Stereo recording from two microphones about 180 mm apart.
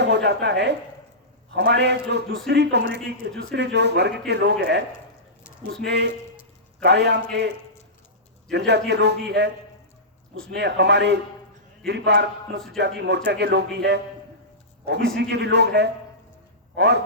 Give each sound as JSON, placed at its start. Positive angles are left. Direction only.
{"t": 0.0, "sound": "a woman's voice", "side_deg": -70}
{"t": 5.8, "sound": "a man's voice", "side_deg": -70}
{"t": 10.5, "sound": "a man's voice", "side_deg": -70}